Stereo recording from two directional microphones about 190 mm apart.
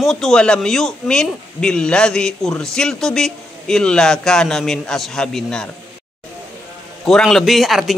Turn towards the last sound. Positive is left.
turn(degrees=0)  # may be behind; listen again after turning